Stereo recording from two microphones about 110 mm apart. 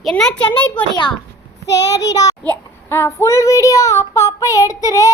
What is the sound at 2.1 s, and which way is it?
Speech, 35° left (ahead or behind).